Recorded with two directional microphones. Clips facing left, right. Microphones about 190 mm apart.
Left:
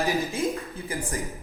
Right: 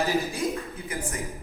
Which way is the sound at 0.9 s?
30° left (ahead or behind).